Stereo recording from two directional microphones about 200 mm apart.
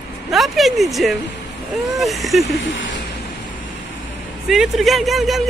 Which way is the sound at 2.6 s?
70° left (ahead or behind).